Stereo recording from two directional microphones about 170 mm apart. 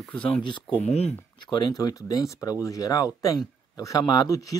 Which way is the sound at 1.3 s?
25° left (ahead or behind).